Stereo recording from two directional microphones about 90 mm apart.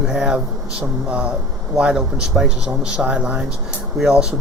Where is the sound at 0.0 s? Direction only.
5° right (ahead or behind).